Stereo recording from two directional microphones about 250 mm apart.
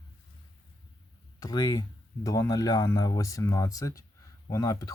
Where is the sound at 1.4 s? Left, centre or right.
Centre.